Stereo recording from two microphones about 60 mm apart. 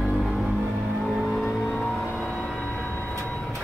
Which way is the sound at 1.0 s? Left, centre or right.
Centre.